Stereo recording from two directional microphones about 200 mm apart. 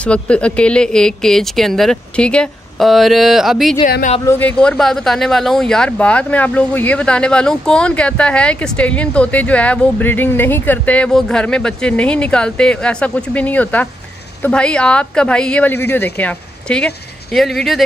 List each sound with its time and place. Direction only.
0.0 s speech: 5° left (ahead or behind)
3.8 s speech: 40° left (ahead or behind)
4.3 s speech: 10° left (ahead or behind)